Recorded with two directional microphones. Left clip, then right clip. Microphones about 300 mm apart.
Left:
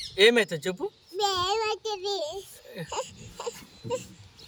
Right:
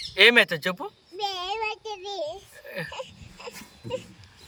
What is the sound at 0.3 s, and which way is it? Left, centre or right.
Speech, centre.